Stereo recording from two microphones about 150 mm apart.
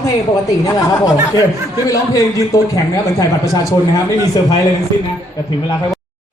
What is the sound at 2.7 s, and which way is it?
A man's voice, 25° left (ahead or behind).